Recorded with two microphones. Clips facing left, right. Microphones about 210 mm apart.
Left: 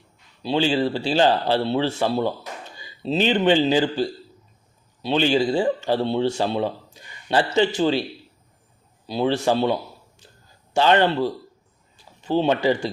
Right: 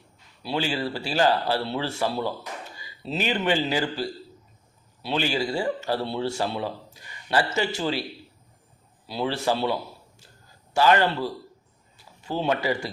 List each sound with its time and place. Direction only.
0.4 s a man's voice: 25° left (ahead or behind)
9.0 s a man's voice: 20° left (ahead or behind)
10.8 s speech: 25° left (ahead or behind)
12.3 s speech: 25° left (ahead or behind)